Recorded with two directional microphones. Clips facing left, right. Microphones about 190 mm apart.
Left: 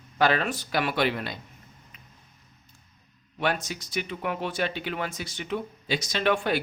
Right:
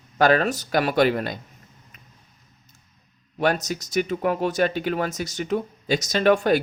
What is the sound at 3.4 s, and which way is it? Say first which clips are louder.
Speech: right 6 dB; 40° right (ahead or behind).